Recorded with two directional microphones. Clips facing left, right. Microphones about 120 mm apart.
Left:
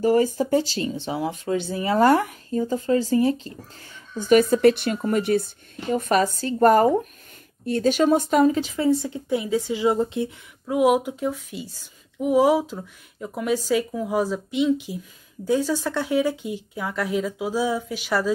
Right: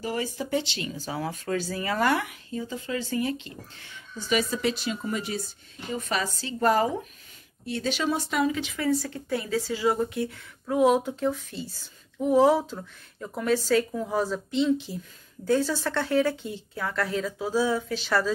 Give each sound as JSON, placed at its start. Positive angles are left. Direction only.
{"t": 0.0, "sound": "speech", "side_deg": 45}
{"t": 2.0, "sound": "speech", "side_deg": 40}
{"t": 8.8, "sound": "speech", "side_deg": 25}
{"t": 10.7, "sound": "speech", "side_deg": 10}